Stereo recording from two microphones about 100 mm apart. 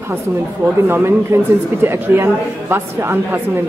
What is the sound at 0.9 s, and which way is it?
A man's voice, 25° right (ahead or behind).